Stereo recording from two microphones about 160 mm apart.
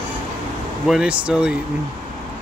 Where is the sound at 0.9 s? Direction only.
5° right (ahead or behind).